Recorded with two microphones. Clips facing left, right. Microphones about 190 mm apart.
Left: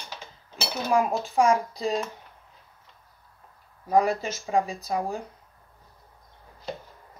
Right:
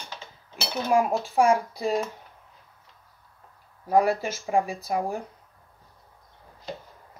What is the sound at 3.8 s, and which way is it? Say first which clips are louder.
Speech: right 1 dB; 10° right (ahead or behind).